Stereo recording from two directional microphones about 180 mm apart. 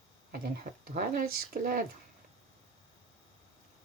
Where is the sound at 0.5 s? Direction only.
55° right (ahead or behind).